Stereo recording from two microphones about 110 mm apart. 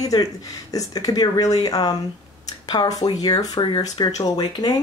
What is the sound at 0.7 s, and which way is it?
Speech, 35° left (ahead or behind).